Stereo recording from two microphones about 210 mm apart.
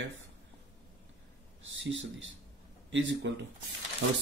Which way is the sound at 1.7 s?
60° right (ahead or behind).